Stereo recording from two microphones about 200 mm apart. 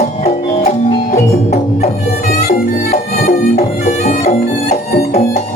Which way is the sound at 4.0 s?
35° left (ahead or behind).